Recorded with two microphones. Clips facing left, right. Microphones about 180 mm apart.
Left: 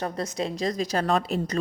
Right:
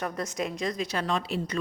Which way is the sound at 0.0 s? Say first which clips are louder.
Left 2 dB; 30° left (ahead or behind).